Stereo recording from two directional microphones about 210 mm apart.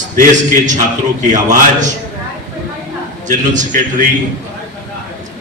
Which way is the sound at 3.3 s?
35° right (ahead or behind).